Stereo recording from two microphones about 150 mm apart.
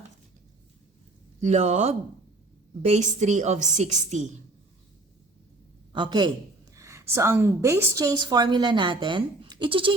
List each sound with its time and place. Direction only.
1.4 s a woman's voice: 50° right (ahead or behind)
5.9 s a man's voice: 30° right (ahead or behind)
6.7 s a woman's voice: 20° right (ahead or behind); by 9.9 s 35° right (ahead or behind)